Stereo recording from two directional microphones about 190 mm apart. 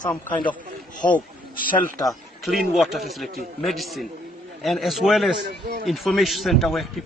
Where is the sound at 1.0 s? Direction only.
25° left (ahead or behind).